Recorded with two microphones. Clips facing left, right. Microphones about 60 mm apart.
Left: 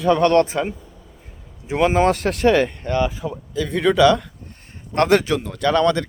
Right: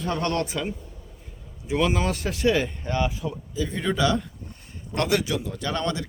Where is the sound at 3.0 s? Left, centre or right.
Left.